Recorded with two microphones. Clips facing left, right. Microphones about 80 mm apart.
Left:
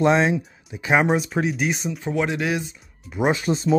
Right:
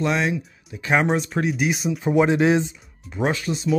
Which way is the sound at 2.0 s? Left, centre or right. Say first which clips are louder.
Right 6 dB; right.